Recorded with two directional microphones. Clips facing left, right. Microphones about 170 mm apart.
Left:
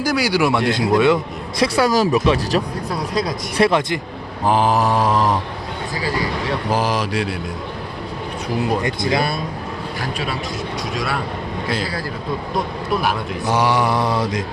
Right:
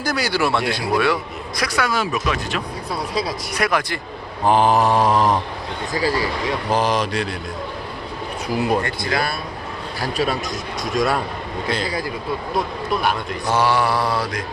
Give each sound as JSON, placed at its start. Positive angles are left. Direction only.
{"t": 0.0, "sound": "a man's voice", "side_deg": 10}
{"t": 2.9, "sound": "a man's voice", "side_deg": 0}
{"t": 3.6, "sound": "a man's voice", "side_deg": 25}
{"t": 4.4, "sound": "a man's voice", "side_deg": 0}
{"t": 6.7, "sound": "speech", "side_deg": 5}
{"t": 8.8, "sound": "a man's voice", "side_deg": 20}
{"t": 10.0, "sound": "a man's voice", "side_deg": -40}
{"t": 12.5, "sound": "a man's voice", "side_deg": 5}
{"t": 13.5, "sound": "a man's voice", "side_deg": 15}